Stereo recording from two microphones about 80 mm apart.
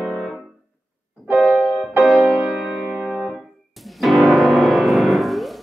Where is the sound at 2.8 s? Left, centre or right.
Centre.